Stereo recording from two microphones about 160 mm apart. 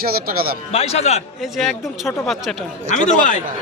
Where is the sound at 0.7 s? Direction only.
40° left (ahead or behind).